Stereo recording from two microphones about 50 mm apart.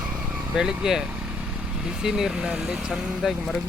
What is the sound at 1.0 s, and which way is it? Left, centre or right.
Vehicle, right.